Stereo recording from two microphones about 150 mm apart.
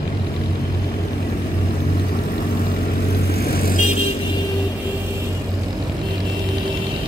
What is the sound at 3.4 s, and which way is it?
Vehicle, 90° left.